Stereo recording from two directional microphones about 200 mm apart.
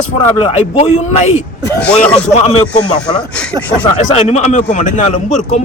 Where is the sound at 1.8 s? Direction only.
5° left (ahead or behind).